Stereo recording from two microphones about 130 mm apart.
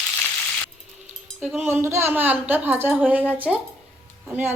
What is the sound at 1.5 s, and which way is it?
Speech, 15° right (ahead or behind).